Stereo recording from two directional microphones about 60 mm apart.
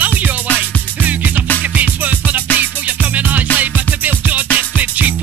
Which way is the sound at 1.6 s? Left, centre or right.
Right.